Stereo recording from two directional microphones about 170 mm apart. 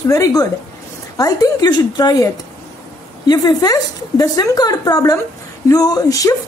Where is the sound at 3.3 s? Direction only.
25° left (ahead or behind).